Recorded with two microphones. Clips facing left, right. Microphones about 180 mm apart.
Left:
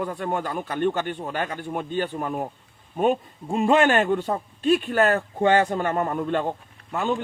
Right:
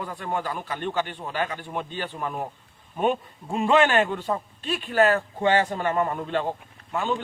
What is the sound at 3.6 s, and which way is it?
A man's voice, 45° left (ahead or behind).